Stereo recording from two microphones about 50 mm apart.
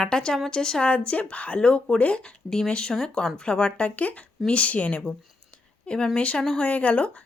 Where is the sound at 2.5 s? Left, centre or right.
Centre.